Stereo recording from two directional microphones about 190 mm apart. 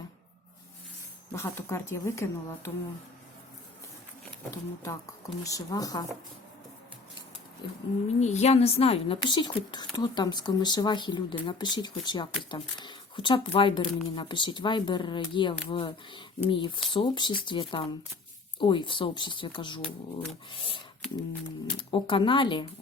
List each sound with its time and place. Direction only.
1.3 s speech: 15° left (ahead or behind)
4.5 s speech: 15° left (ahead or behind)
7.6 s a woman's voice: 25° left (ahead or behind)
8.2 s a woman's voice: 35° left (ahead or behind)